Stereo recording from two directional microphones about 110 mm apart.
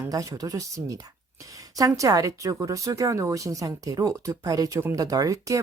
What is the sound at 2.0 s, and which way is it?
Speech, 30° right (ahead or behind).